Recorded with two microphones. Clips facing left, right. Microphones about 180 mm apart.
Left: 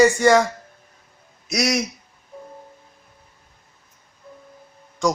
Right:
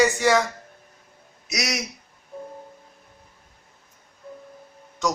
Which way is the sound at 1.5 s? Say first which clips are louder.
Left 7 dB; 50° left (ahead or behind).